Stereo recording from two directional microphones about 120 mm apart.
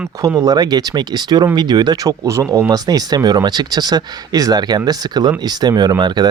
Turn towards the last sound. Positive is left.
turn(degrees=-35)  # may be behind; listen again after turning